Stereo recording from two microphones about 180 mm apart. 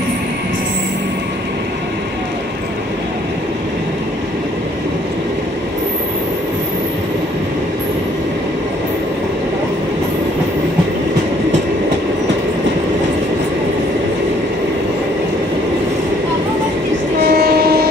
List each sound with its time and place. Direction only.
17.3 s train: 60° right (ahead or behind)